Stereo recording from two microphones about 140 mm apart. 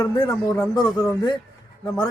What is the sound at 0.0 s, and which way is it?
Speech, 25° left (ahead or behind).